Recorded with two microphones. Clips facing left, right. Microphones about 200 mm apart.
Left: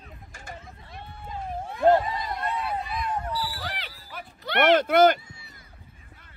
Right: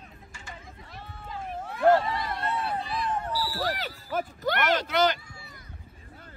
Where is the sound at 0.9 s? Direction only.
25° left (ahead or behind).